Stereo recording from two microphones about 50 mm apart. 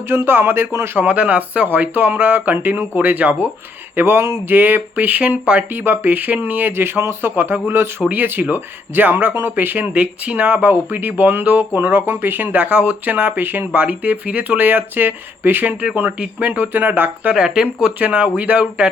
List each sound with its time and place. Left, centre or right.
0.1 s speech: right
0.9 s speech: right
3.9 s speech: right
4.5 s speech: right
5.6 s speech: right
10.0 s speech: right
10.6 s speech: right
13.7 s speech: right
17.3 s speech: centre
18.0 s speech: right